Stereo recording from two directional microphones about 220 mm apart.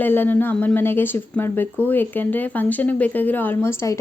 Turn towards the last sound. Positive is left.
turn(degrees=10)  # may be behind; listen again after turning